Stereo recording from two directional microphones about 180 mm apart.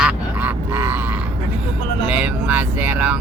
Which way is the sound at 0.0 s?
10° right (ahead or behind).